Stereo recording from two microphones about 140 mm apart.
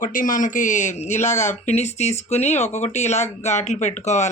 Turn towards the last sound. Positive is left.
turn(degrees=55)  # may be behind; listen again after turning